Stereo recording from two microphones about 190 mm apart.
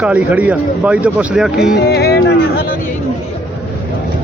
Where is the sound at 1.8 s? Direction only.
60° left (ahead or behind).